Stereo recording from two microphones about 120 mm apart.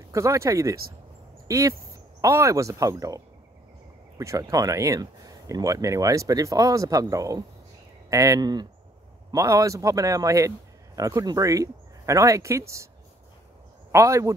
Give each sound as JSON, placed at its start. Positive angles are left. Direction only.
{"t": 0.1, "sound": "speech", "side_deg": -25}
{"t": 4.2, "sound": "speech", "side_deg": -25}
{"t": 13.9, "sound": "speech", "side_deg": -25}